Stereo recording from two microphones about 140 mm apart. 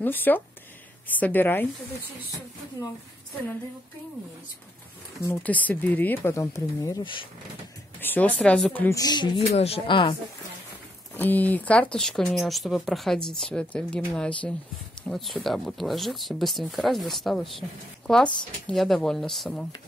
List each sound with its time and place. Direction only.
0.0 s speech: 15° left (ahead or behind)
5.2 s speech: 15° left (ahead or behind)
8.0 s speech: 10° left (ahead or behind)
8.8 s a sound: 25° left (ahead or behind)
9.5 s speech: 45° left (ahead or behind)
11.1 s speech: 10° left (ahead or behind)